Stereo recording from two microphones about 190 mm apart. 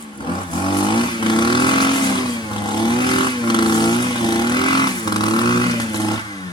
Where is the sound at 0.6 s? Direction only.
25° left (ahead or behind).